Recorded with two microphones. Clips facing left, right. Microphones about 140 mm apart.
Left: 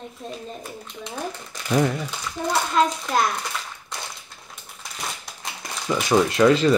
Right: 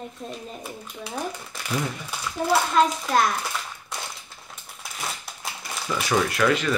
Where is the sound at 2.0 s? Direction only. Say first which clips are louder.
Right 3 dB; 5° right (ahead or behind).